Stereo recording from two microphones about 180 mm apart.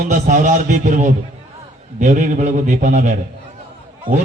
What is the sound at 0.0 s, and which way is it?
A man's voice, 45° right (ahead or behind).